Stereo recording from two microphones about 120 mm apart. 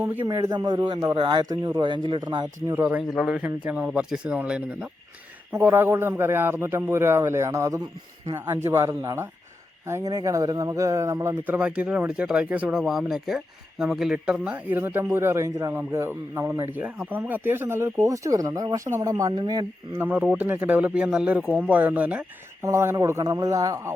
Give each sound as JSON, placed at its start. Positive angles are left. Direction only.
{"t": 0.0, "sound": "a man's voice", "side_deg": -15}
{"t": 0.5, "sound": "a man's voice", "side_deg": -35}
{"t": 2.6, "sound": "speech", "side_deg": -15}
{"t": 3.1, "sound": "a man's voice", "side_deg": -5}
{"t": 19.9, "sound": "speech", "side_deg": -15}
{"t": 22.6, "sound": "a man's voice", "side_deg": -25}